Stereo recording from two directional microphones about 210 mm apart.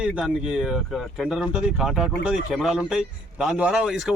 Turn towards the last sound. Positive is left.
turn(degrees=-5)  # may be behind; listen again after turning